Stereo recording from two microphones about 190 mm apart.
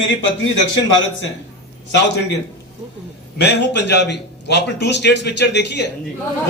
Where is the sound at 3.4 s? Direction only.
60° left (ahead or behind).